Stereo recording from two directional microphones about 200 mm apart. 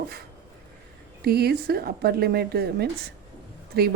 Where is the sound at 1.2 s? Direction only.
50° right (ahead or behind).